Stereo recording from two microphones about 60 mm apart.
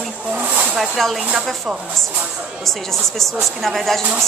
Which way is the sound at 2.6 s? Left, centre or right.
Centre.